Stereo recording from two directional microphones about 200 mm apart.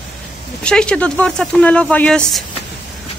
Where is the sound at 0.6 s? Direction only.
5° left (ahead or behind).